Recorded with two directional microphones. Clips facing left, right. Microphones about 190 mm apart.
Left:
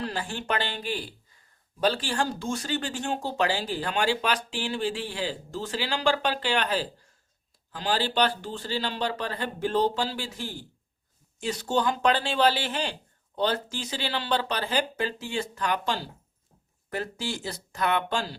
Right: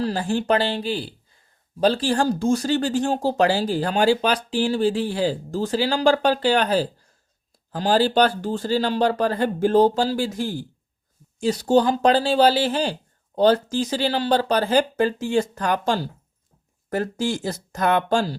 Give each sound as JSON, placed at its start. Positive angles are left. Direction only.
{"t": 0.0, "sound": "speech", "side_deg": -40}